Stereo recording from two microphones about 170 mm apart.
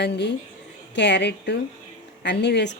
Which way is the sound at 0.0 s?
85° left.